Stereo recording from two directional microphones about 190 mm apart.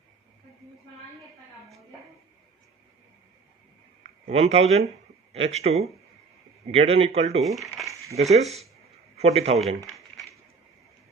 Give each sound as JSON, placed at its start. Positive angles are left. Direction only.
{"t": 4.3, "sound": "speech", "side_deg": -30}
{"t": 7.4, "sound": "speech", "side_deg": 0}
{"t": 7.8, "sound": "a sound", "side_deg": 0}
{"t": 8.1, "sound": "a man's voice", "side_deg": -35}